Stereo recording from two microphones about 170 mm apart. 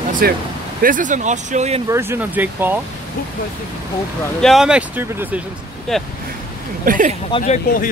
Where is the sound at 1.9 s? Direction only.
15° right (ahead or behind).